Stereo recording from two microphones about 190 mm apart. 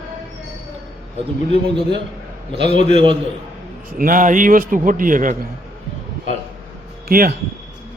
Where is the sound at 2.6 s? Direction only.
35° left (ahead or behind).